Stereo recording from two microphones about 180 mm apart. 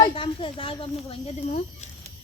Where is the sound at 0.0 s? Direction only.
30° left (ahead or behind).